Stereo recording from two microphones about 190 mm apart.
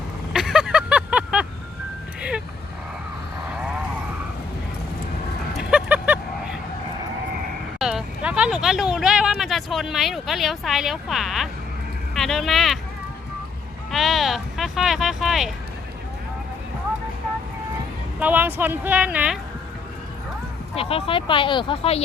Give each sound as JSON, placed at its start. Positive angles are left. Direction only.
{"t": 0.3, "sound": "vehicle", "side_deg": -5}
{"t": 5.5, "sound": "a sound", "side_deg": -5}
{"t": 7.8, "sound": "speech", "side_deg": -5}
{"t": 13.9, "sound": "a sound", "side_deg": 0}
{"t": 18.2, "sound": "speech", "side_deg": -10}
{"t": 20.7, "sound": "speech", "side_deg": 30}